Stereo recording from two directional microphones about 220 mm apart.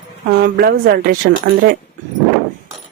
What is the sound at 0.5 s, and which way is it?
Speech, 45° right (ahead or behind).